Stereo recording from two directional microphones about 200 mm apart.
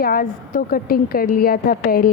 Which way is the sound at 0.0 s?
45° left (ahead or behind).